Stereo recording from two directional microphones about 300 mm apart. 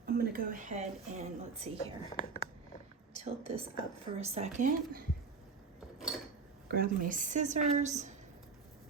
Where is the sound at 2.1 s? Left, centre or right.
Left.